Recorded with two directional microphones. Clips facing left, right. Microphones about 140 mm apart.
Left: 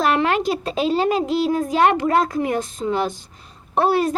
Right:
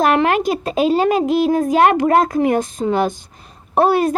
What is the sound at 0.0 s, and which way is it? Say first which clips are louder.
Speech: right 4 dB; 55° right (ahead or behind).